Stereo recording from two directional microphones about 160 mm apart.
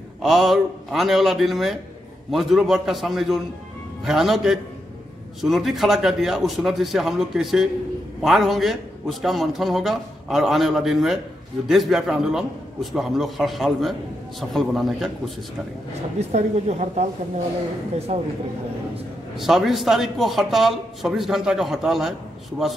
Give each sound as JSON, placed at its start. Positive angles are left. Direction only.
{"t": 0.2, "sound": "speech", "side_deg": 0}
{"t": 16.2, "sound": "a woman's voice", "side_deg": -45}
{"t": 19.3, "sound": "speech", "side_deg": 0}